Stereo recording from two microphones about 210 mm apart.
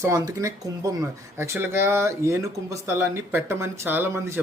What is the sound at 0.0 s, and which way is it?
Speech, 15° right (ahead or behind).